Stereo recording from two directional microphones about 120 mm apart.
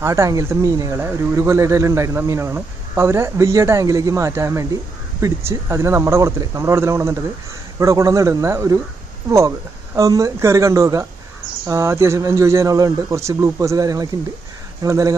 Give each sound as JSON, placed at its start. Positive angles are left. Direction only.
{"t": 0.0, "sound": "speech", "side_deg": -25}
{"t": 9.9, "sound": "speech", "side_deg": -30}